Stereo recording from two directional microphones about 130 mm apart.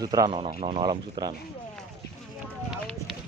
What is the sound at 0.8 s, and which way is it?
Speech, 30° right (ahead or behind).